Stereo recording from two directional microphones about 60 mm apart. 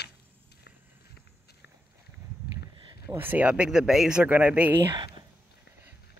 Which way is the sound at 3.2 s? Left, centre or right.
Right.